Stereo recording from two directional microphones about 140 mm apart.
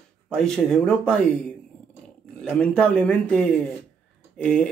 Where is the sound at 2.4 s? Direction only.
5° left (ahead or behind).